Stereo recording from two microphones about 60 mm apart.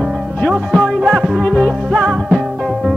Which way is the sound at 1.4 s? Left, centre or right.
Left.